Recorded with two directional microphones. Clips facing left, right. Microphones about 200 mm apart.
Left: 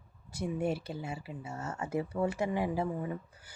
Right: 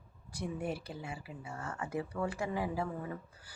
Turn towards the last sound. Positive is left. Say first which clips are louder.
# left 4 dB
turn(degrees=20)  # may be behind; listen again after turning